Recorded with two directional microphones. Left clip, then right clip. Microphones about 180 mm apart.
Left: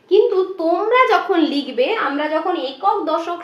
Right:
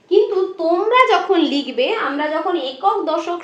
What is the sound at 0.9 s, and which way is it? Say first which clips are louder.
A woman's voice: right 1 dB; 5° right (ahead or behind).